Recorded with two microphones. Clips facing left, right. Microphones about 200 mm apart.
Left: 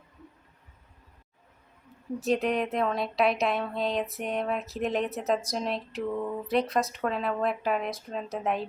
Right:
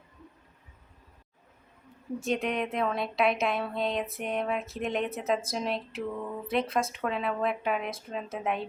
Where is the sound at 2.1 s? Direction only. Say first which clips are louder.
Left 3 dB; centre (ahead or behind).